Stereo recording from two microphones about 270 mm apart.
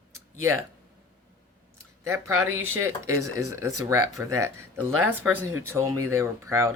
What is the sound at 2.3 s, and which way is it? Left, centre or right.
Speech, right.